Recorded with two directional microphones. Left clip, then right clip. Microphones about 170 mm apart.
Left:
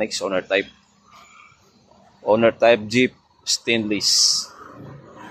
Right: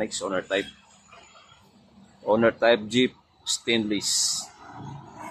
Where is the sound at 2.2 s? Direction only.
15° left (ahead or behind).